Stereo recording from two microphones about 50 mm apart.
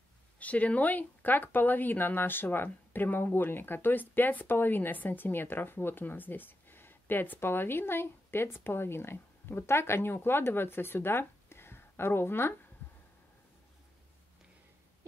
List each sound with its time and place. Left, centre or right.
0.4 s speech: left